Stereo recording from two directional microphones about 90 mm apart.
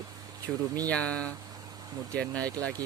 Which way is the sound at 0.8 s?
15° left (ahead or behind).